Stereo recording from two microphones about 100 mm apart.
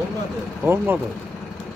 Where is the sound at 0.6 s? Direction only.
20° right (ahead or behind).